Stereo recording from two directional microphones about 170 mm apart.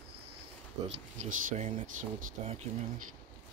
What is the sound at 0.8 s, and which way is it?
Speech, 40° right (ahead or behind).